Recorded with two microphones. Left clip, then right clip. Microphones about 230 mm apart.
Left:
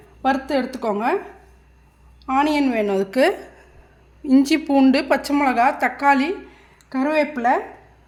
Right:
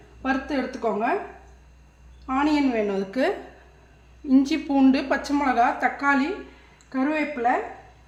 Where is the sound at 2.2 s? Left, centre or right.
Left.